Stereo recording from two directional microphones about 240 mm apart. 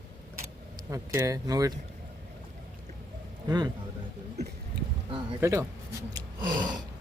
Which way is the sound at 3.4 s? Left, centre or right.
Centre.